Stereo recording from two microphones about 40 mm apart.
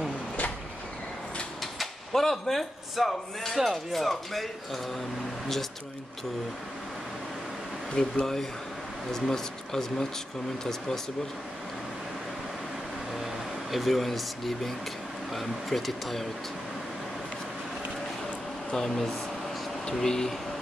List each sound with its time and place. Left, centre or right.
1.6 s speech: centre
7.9 s speech: centre
13.1 s speech: centre
18.7 s speech: centre